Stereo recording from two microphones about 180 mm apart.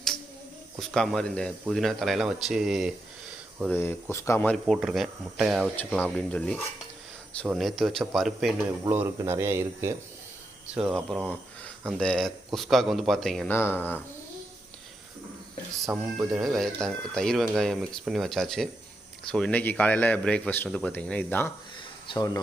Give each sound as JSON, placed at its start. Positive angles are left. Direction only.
{"t": 0.8, "sound": "speech", "side_deg": 0}
{"t": 3.7, "sound": "a man's voice", "side_deg": 10}
{"t": 4.6, "sound": "a man's voice", "side_deg": -5}
{"t": 8.8, "sound": "speech", "side_deg": -15}
{"t": 10.8, "sound": "speech", "side_deg": 0}
{"t": 15.9, "sound": "a man's voice", "side_deg": -5}
{"t": 22.0, "sound": "speech", "side_deg": 25}